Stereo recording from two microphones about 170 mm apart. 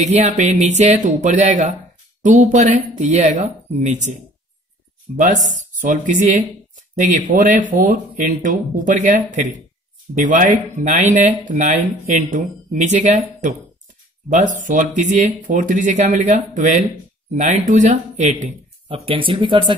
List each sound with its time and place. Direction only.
0.0 s speech: 40° right (ahead or behind)